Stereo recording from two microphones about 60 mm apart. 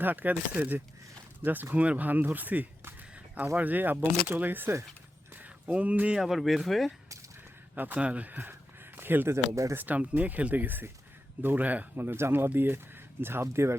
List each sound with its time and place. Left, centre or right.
0.0 s speech: right
5.3 s a sound: right
6.1 s speech: centre
7.9 s speech: right
9.0 s a sound: right
9.3 s speech: right
9.7 s speech: right
11.9 s speech: right